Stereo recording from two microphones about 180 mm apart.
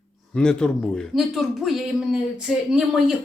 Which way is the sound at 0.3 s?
5° left (ahead or behind).